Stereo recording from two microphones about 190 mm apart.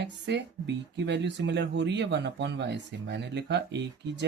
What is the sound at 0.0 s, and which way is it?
Speech, 65° right (ahead or behind).